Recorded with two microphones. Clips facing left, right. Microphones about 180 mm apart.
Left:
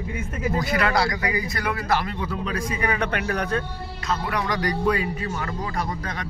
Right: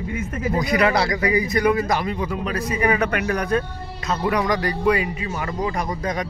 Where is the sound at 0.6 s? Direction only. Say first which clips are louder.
Right 4 dB; 20° right (ahead or behind).